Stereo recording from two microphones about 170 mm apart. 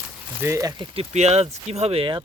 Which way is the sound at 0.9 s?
40° right (ahead or behind).